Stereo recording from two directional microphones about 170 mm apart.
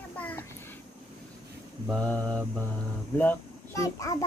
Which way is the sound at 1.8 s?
5° left (ahead or behind).